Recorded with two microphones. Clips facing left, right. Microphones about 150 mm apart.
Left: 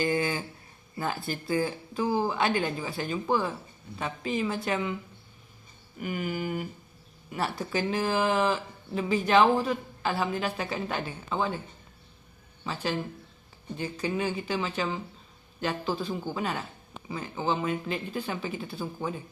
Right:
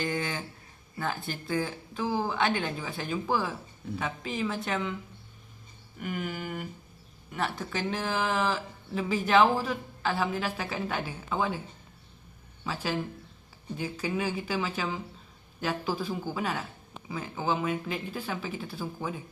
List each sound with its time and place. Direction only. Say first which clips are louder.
0.0 s a sound: left 4 dB; 5° left (ahead or behind)
1.0 s speech: left 2 dB; 5° left (ahead or behind)
6.0 s speech: left 3 dB; 5° left (ahead or behind)
12.6 s speech: left 1 dB; 5° right (ahead or behind)